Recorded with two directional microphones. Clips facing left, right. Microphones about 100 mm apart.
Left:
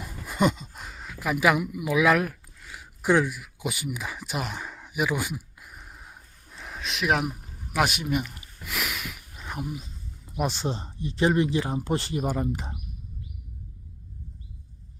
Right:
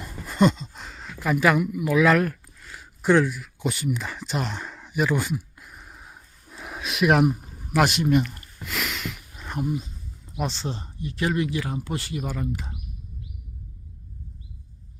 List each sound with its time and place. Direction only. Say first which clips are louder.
0.0 s a sound: right 4 dB; 10° left (ahead or behind)
9.1 s cricket: right 4 dB; centre (ahead or behind)
10.2 s speech: left 2 dB; 10° left (ahead or behind); by 12.5 s 35° left (ahead or behind)